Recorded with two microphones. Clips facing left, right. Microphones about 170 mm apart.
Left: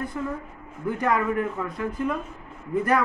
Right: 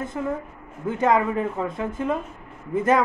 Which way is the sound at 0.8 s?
20° right (ahead or behind).